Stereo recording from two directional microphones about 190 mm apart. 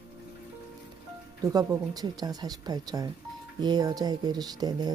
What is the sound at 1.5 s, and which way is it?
Speech, 20° right (ahead or behind).